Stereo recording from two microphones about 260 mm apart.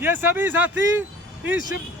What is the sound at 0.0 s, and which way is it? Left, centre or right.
Speech, centre.